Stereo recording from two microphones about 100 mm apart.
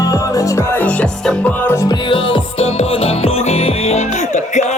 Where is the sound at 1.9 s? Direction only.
55° left (ahead or behind).